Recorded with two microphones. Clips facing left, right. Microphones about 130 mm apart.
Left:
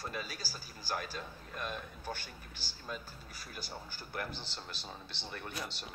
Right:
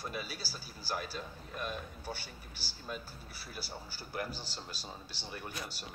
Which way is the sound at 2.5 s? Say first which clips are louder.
Right 2 dB; 10° right (ahead or behind).